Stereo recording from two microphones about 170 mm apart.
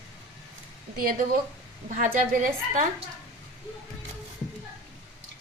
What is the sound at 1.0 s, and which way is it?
A woman's voice, 55° right (ahead or behind).